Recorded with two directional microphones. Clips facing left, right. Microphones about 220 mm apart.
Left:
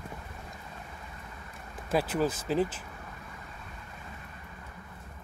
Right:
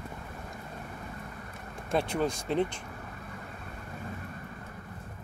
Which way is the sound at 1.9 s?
5° left (ahead or behind).